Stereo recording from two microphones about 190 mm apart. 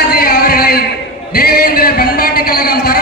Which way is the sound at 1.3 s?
55° left (ahead or behind).